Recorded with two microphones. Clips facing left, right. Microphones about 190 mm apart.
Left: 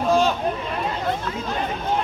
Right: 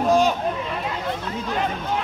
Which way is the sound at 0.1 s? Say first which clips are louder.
Even; 15° right (ahead or behind).